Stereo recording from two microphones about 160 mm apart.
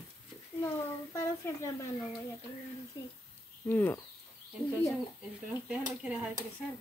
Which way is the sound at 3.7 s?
10° left (ahead or behind).